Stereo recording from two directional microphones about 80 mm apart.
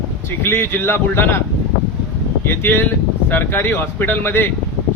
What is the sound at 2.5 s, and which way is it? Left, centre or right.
Speech, left.